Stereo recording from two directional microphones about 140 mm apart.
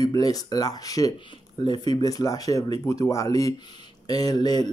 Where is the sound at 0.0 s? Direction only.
25° left (ahead or behind).